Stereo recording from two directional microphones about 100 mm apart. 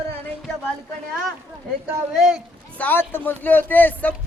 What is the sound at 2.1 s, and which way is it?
Speech, 5° right (ahead or behind).